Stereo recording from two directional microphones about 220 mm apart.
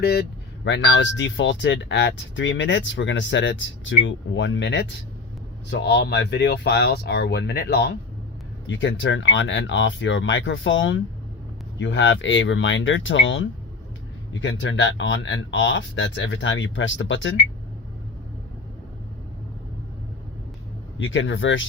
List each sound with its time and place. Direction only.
0.0 s speech: 45° left (ahead or behind)
21.0 s speech: 60° left (ahead or behind)